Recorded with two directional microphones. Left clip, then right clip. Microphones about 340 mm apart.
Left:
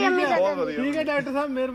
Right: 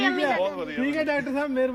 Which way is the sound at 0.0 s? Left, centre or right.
Centre.